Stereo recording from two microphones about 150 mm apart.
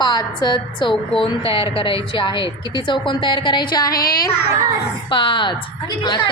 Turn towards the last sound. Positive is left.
turn(degrees=30)  # may be behind; listen again after turning